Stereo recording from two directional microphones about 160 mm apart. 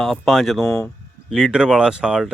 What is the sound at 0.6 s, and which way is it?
Speech, 15° left (ahead or behind).